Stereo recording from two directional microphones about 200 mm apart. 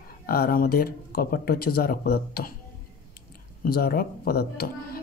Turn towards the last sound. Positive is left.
turn(degrees=50)  # may be behind; listen again after turning